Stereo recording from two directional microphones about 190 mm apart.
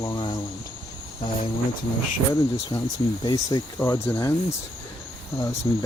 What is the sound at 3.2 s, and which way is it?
Speech, 20° left (ahead or behind).